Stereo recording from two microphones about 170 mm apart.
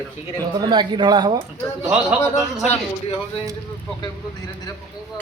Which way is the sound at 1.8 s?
5° right (ahead or behind).